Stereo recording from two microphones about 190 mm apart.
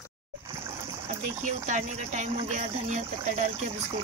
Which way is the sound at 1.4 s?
40° right (ahead or behind).